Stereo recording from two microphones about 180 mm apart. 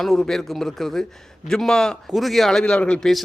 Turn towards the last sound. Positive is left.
turn(degrees=0)  # may be behind; listen again after turning